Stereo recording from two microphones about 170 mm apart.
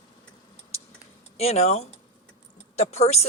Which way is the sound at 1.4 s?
40° left (ahead or behind).